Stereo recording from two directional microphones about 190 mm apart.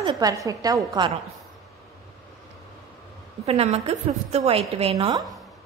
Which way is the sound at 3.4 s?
35° right (ahead or behind).